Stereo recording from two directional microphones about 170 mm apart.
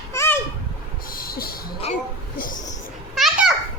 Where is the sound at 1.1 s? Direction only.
60° left (ahead or behind).